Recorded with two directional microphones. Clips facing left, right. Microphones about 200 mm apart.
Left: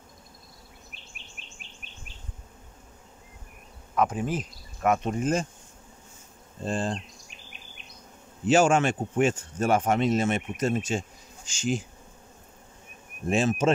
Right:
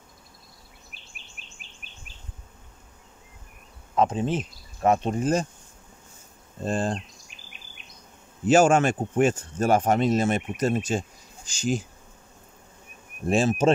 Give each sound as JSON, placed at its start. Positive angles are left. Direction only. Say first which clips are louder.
{"t": 3.9, "sound": "speech", "louder": "right 3 dB", "side_deg": -25}
{"t": 6.6, "sound": "speech", "louder": "right 3 dB", "side_deg": -45}
{"t": 8.5, "sound": "speech", "louder": "right 3 dB", "side_deg": -40}
{"t": 13.3, "sound": "speech", "louder": "right 2 dB", "side_deg": -35}